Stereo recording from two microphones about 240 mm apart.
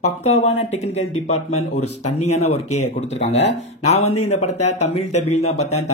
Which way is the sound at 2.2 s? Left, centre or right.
Left.